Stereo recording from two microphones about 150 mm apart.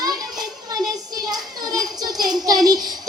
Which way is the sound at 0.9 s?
25° right (ahead or behind).